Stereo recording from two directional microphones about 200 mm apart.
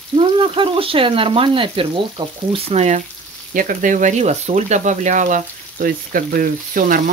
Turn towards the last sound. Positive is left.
turn(degrees=-45)  # may be behind; listen again after turning